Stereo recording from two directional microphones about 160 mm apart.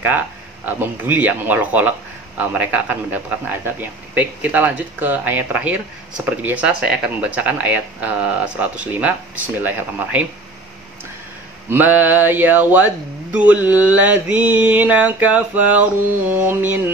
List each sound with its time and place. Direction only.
0.7 s a man's voice: 10° right (ahead or behind)
11.7 s a man's voice: 10° right (ahead or behind)